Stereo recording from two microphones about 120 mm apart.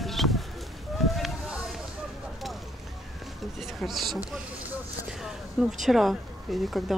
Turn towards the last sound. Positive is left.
turn(degrees=0)  # may be behind; listen again after turning